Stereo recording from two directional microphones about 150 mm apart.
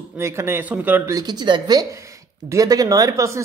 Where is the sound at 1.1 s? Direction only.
30° right (ahead or behind).